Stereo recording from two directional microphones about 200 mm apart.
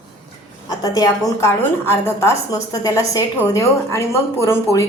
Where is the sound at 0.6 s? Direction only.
20° left (ahead or behind).